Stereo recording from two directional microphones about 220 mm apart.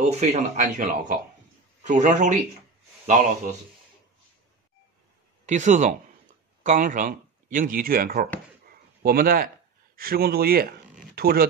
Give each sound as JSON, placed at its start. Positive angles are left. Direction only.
{"t": 0.1, "sound": "a man's voice", "side_deg": -30}
{"t": 5.5, "sound": "speech", "side_deg": -35}